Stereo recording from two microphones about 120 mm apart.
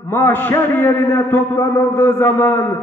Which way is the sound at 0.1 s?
15° left (ahead or behind).